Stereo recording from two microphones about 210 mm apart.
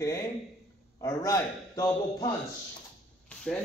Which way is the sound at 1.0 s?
15° left (ahead or behind).